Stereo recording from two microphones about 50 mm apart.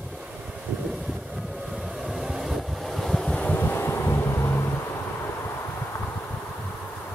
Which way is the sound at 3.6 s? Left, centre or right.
Left.